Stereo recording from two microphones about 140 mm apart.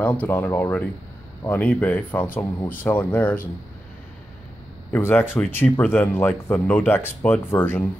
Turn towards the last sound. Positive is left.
turn(degrees=15)  # may be behind; listen again after turning